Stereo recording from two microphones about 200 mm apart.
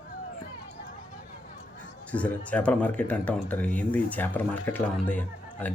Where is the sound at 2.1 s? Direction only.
5° left (ahead or behind).